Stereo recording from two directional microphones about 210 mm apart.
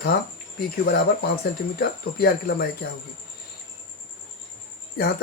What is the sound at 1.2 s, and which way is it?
Speech, 50° left (ahead or behind).